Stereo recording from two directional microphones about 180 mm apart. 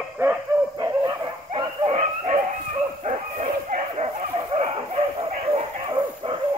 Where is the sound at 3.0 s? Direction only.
40° right (ahead or behind).